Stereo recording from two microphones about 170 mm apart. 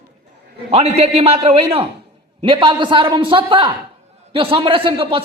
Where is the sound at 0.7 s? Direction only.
35° right (ahead or behind).